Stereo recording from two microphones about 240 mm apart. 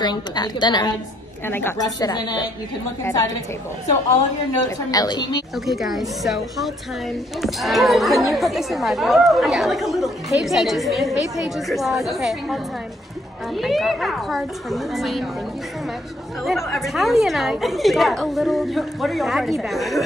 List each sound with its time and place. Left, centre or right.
0.0 s a woman's voice: centre
4.6 s a woman's voice: centre
5.7 s speech: centre
13.6 s speech: centre
16.4 s speech: centre